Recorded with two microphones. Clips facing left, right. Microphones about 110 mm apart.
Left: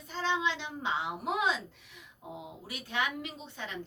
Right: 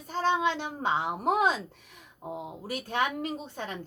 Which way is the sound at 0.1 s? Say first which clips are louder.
Right 5 dB; 45° right (ahead or behind).